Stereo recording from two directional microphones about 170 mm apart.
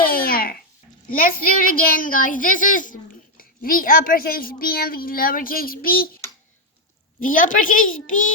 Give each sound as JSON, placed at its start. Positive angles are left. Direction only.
{"t": 0.0, "sound": "a sound", "side_deg": 60}
{"t": 1.0, "sound": "a woman's voice", "side_deg": 55}
{"t": 7.2, "sound": "a woman's voice", "side_deg": 50}